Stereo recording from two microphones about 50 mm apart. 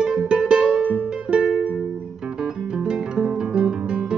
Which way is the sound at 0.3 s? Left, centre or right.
Centre.